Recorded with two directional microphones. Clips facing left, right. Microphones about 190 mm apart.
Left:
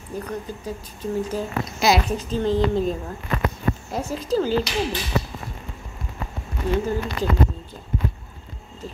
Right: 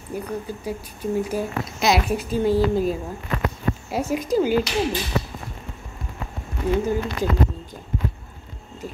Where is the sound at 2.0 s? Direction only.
10° right (ahead or behind).